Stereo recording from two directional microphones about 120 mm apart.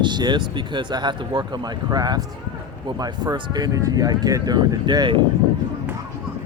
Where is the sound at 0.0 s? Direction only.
40° right (ahead or behind).